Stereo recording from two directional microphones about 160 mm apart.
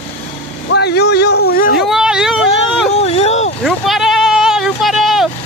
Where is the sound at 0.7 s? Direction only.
90° left; by 1.8 s 70° left (ahead or behind).